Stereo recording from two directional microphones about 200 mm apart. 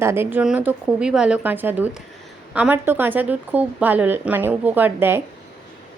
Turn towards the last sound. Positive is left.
turn(degrees=-10)  # may be behind; listen again after turning